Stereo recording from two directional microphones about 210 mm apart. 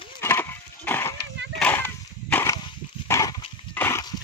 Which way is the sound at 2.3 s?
10° left (ahead or behind).